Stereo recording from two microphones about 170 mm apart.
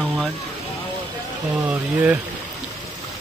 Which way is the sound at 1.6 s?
10° right (ahead or behind).